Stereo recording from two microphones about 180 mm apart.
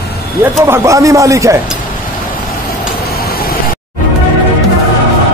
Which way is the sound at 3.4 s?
55° left (ahead or behind).